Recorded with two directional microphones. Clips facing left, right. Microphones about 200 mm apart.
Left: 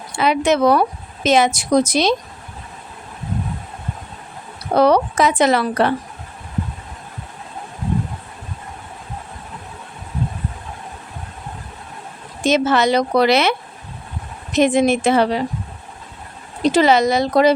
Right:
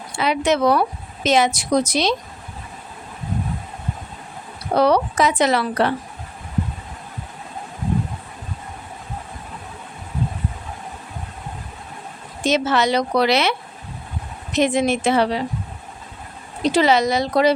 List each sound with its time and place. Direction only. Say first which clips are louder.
0.2 s a woman's voice: left 3 dB; 50° left (ahead or behind)
4.8 s a woman's voice: left 2 dB; 50° left (ahead or behind)
12.5 s a woman's voice: left 3 dB; 50° left (ahead or behind)
16.7 s a woman's voice: left 2 dB; 50° left (ahead or behind)